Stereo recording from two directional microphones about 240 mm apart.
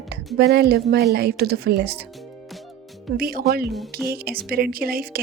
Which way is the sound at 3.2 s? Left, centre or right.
Right.